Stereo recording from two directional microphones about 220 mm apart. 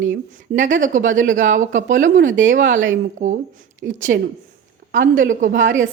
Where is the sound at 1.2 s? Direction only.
35° right (ahead or behind).